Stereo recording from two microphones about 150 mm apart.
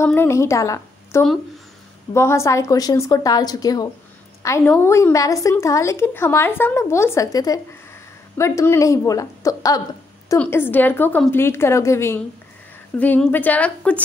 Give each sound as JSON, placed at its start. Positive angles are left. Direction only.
{"t": 0.0, "sound": "a woman's voice", "side_deg": 15}